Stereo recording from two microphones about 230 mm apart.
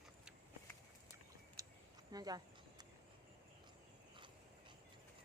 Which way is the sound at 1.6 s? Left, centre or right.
Centre.